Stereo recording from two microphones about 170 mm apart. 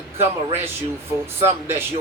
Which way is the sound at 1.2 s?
15° right (ahead or behind).